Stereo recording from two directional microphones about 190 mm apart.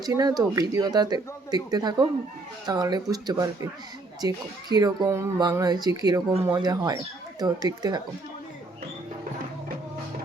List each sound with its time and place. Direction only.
0.0 s speech: 20° right (ahead or behind)